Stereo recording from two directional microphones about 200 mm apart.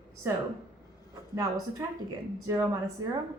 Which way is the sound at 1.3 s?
15° right (ahead or behind).